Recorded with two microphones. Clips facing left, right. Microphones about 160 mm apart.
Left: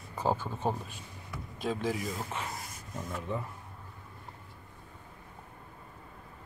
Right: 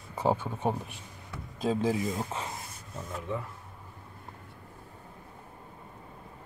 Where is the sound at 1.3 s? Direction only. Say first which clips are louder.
Right 4 dB; 35° right (ahead or behind).